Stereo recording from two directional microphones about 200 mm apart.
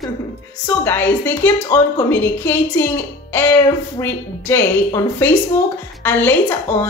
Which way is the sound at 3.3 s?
10° left (ahead or behind).